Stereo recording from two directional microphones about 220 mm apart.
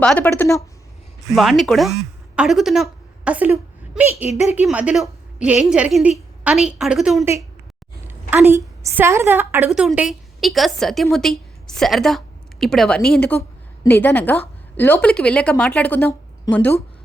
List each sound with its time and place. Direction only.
0.0 s speech: 5° left (ahead or behind)
1.4 s a woman's voice: centre (ahead or behind)
4.3 s speech: 30° left (ahead or behind)
4.5 s a woman's voice: 5° right (ahead or behind)